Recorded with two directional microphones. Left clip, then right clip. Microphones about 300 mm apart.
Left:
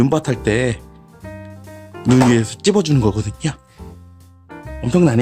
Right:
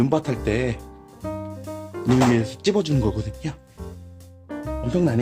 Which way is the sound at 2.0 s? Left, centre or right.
Left.